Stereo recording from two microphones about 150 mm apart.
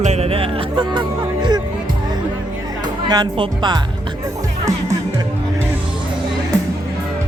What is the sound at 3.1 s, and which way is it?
Speech, 30° right (ahead or behind).